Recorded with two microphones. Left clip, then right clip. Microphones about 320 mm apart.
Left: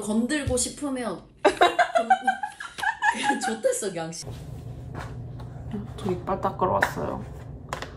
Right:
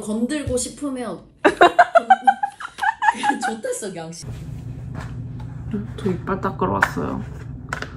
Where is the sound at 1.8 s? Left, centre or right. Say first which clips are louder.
Right 7 dB; centre.